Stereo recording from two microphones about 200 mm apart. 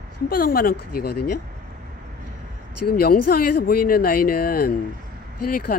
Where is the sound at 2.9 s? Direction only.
50° left (ahead or behind).